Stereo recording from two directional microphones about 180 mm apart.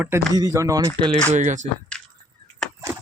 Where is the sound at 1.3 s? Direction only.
45° right (ahead or behind).